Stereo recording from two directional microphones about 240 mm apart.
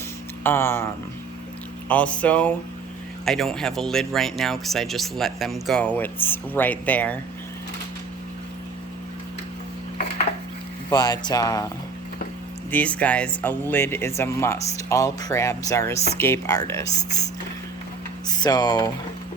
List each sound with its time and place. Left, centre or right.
0.4 s speech: centre
1.9 s speech: centre
10.8 s speech: centre
12.7 s speech: centre
18.3 s speech: centre